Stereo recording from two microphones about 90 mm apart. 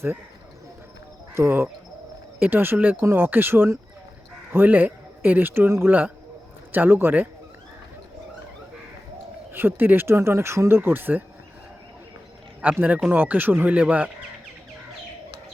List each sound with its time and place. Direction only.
1.3 s speech: 25° right (ahead or behind)
9.5 s speech: 25° right (ahead or behind)
12.6 s speech: 20° right (ahead or behind)